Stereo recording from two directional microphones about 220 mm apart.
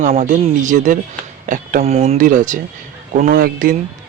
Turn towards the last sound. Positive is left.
turn(degrees=-40)  # may be behind; listen again after turning